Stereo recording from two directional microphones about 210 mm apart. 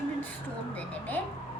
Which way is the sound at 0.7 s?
5° left (ahead or behind).